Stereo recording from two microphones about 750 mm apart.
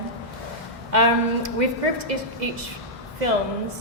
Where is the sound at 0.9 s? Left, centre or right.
Right.